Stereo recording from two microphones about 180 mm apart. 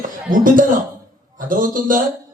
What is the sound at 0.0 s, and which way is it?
Speech, 50° right (ahead or behind).